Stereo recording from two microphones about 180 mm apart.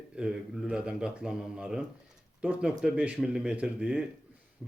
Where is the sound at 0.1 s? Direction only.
5° right (ahead or behind).